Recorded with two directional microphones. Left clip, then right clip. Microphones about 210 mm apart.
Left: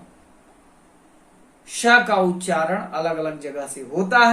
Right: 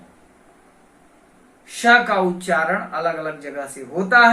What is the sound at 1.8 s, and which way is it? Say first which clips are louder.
Speech: right 1 dB; 15° left (ahead or behind).